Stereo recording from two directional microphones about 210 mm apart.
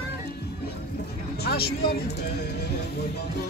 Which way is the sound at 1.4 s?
50° left (ahead or behind).